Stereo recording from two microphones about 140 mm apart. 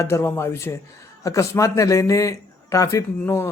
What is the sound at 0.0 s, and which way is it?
Speech, 20° left (ahead or behind).